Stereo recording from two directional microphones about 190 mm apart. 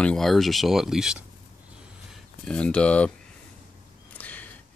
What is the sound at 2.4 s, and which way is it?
Speech, 5° left (ahead or behind).